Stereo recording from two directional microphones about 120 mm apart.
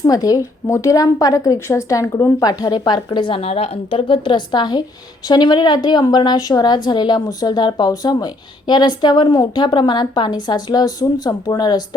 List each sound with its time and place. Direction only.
0.0 s a woman's voice: 30° left (ahead or behind)